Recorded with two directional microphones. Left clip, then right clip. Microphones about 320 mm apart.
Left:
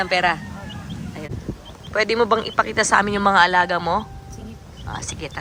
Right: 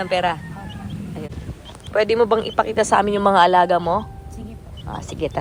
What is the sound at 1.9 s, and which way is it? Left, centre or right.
Speech, centre.